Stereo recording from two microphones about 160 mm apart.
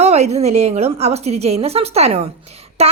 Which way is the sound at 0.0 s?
40° right (ahead or behind).